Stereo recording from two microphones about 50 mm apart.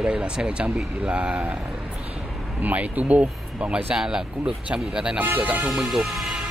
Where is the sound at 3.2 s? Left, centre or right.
Right.